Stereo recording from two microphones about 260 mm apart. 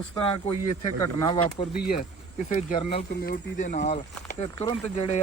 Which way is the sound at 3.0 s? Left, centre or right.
Left.